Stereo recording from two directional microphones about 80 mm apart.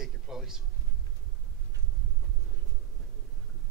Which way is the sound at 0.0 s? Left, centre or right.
Centre.